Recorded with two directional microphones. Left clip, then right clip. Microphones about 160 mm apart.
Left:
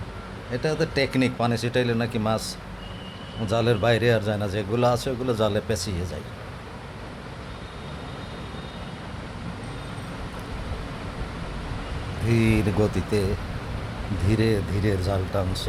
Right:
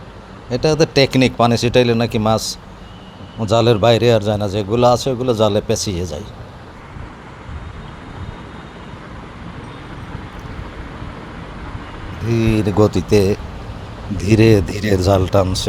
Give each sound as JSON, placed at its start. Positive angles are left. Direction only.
{"t": 0.5, "sound": "a man's voice", "side_deg": -40}
{"t": 12.2, "sound": "a sound", "side_deg": -10}
{"t": 12.5, "sound": "speech", "side_deg": -25}